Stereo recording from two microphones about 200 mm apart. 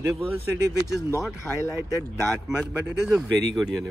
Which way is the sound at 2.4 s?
5° right (ahead or behind).